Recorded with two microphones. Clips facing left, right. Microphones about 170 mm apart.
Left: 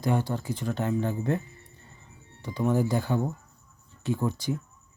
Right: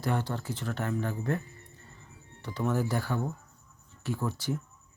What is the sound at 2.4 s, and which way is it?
Speech, 15° left (ahead or behind).